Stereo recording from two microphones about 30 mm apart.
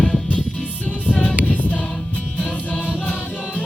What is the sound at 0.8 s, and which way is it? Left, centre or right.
Music, left.